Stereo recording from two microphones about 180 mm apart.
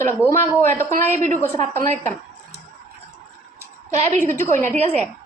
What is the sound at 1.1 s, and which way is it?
Speech, 45° right (ahead or behind).